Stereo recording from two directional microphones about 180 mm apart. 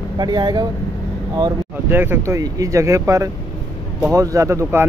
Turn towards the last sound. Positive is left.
turn(degrees=-15)  # may be behind; listen again after turning